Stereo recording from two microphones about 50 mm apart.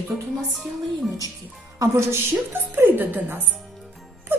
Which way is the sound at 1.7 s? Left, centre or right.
Right.